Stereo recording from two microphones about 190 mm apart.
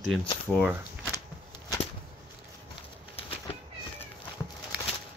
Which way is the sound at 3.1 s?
30° left (ahead or behind).